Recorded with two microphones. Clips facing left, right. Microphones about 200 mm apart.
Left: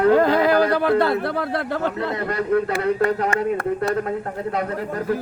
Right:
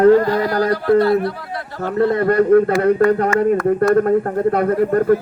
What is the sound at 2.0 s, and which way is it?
Speech, 55° right (ahead or behind).